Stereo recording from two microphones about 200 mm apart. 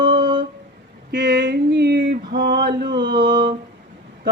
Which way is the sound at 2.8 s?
20° right (ahead or behind).